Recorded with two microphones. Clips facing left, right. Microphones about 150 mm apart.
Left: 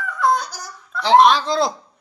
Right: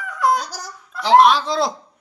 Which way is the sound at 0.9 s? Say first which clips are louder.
Even; 5° right (ahead or behind).